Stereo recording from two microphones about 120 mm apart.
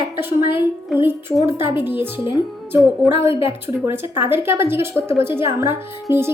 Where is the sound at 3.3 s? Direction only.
50° left (ahead or behind).